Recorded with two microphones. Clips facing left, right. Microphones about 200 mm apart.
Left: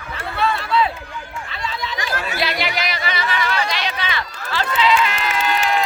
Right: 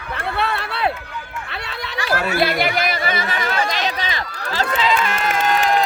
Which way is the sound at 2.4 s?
50° right (ahead or behind).